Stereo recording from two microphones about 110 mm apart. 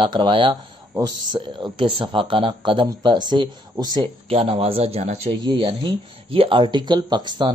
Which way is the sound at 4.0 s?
60° right (ahead or behind).